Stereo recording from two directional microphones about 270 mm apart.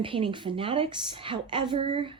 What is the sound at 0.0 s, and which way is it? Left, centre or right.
A woman's voice, centre.